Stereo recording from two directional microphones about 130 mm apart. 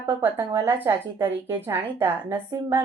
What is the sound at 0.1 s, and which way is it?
A woman's voice, 15° right (ahead or behind).